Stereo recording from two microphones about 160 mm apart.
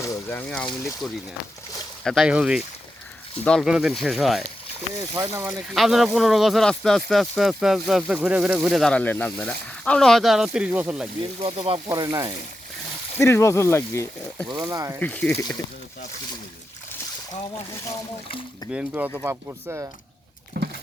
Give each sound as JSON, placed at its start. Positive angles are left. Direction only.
{"t": 0.0, "sound": "speech", "side_deg": 15}
{"t": 5.5, "sound": "speech", "side_deg": 0}
{"t": 11.2, "sound": "speech", "side_deg": -35}
{"t": 11.9, "sound": "speech", "side_deg": -25}
{"t": 13.1, "sound": "speech", "side_deg": 15}
{"t": 14.4, "sound": "speech", "side_deg": -25}
{"t": 15.0, "sound": "speech", "side_deg": 10}
{"t": 18.7, "sound": "speech", "side_deg": -10}
{"t": 20.6, "sound": "a sound", "side_deg": -90}